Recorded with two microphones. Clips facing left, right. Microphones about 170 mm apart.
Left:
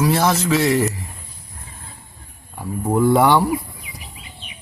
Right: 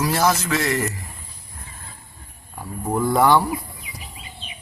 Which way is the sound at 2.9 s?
10° left (ahead or behind).